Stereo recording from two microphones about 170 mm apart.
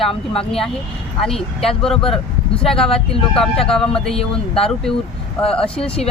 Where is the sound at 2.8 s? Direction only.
35° left (ahead or behind).